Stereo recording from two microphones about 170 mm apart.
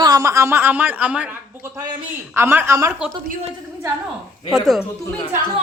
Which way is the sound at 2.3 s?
15° right (ahead or behind).